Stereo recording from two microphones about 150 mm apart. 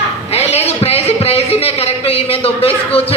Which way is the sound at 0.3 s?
45° left (ahead or behind).